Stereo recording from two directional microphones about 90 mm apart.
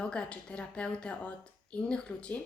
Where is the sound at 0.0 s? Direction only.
10° left (ahead or behind).